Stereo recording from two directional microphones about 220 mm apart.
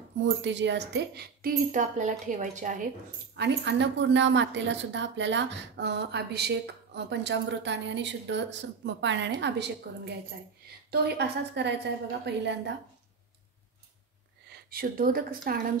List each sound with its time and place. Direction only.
0.4 s a woman's voice: 55° right (ahead or behind); by 2.8 s 35° right (ahead or behind)
3.3 s speech: 50° right (ahead or behind)
14.5 s speech: 40° right (ahead or behind)